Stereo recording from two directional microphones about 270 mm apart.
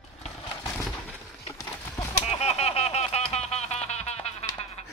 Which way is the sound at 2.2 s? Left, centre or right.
Left.